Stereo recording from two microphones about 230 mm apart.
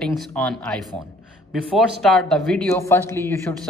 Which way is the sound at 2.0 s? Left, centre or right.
Centre.